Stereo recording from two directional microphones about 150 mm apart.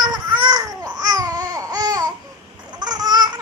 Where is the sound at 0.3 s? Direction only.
25° right (ahead or behind).